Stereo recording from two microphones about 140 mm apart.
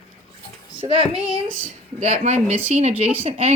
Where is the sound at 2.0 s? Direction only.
55° right (ahead or behind).